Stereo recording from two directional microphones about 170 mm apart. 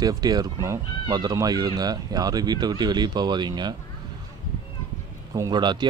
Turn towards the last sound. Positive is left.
turn(degrees=-25)  # may be behind; listen again after turning